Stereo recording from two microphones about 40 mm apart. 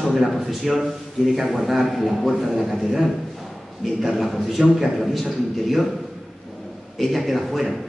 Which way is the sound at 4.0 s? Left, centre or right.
Centre.